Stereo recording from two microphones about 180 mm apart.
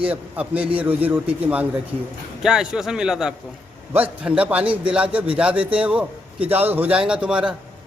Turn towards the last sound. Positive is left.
turn(degrees=-5)  # may be behind; listen again after turning